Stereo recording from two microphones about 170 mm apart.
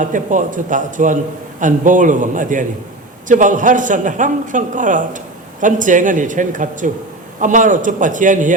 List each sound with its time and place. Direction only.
0.0 s a man's voice: 50° right (ahead or behind)